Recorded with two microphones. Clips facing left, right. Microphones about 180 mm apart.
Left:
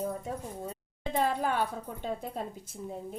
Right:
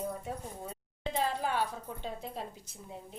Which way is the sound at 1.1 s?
50° left (ahead or behind).